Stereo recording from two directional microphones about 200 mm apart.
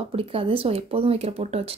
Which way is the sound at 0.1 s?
30° right (ahead or behind).